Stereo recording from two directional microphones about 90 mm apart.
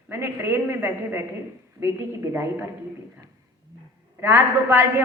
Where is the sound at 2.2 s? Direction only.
25° right (ahead or behind).